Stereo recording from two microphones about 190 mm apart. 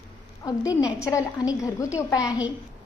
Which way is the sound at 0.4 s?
15° left (ahead or behind).